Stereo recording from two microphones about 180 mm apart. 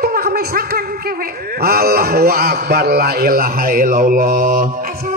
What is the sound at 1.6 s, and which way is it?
A man's voice, 55° right (ahead or behind).